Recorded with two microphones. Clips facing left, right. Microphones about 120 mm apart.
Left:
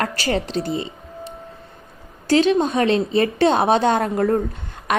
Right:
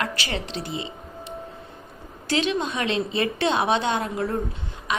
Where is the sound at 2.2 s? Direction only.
40° left (ahead or behind).